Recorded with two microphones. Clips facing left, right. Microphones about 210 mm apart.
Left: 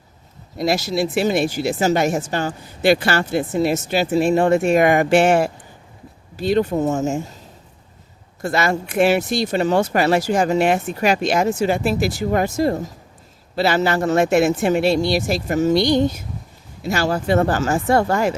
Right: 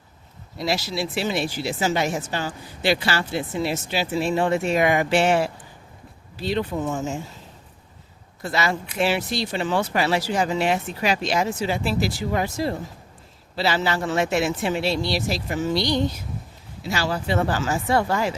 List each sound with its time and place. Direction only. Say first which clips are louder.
0.6 s speech: left 6 dB; 50° left (ahead or behind)
8.4 s speech: left 5 dB; 50° left (ahead or behind)